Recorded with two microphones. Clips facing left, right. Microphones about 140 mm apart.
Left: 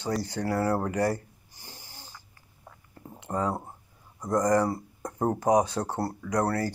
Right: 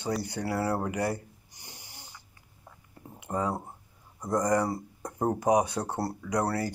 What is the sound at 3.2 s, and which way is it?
Speech, 15° right (ahead or behind).